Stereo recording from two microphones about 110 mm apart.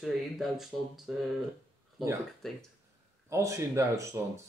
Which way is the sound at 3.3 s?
30° right (ahead or behind).